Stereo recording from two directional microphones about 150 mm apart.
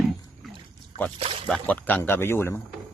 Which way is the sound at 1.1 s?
40° right (ahead or behind).